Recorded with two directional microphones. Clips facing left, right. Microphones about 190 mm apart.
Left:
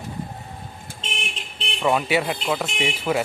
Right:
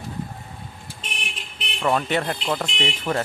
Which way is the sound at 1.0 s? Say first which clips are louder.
Left 4 dB; 25° left (ahead or behind).